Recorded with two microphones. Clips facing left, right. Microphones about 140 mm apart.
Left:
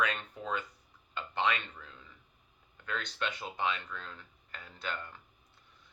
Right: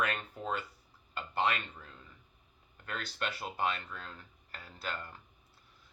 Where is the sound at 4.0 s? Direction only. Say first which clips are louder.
Left 1 dB; 40° right (ahead or behind).